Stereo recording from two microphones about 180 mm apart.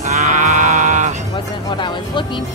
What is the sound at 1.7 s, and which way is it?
Music, 25° left (ahead or behind).